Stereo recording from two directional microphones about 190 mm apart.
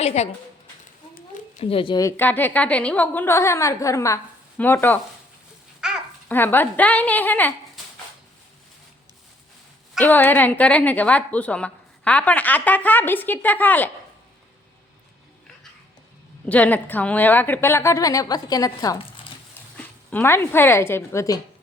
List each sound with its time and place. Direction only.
0.0 s a woman's voice: 35° left (ahead or behind)
1.6 s a woman's voice: 30° left (ahead or behind); by 4.9 s 10° left (ahead or behind)
5.8 s babbling: 5° right (ahead or behind)
6.2 s a woman's voice: 10° left (ahead or behind)
10.0 s a woman's voice: 10° left (ahead or behind)
16.5 s a woman's voice: 10° left (ahead or behind)
19.7 s speech: 10° left (ahead or behind)